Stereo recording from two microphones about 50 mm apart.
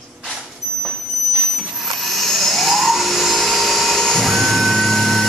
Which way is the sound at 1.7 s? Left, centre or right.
Centre.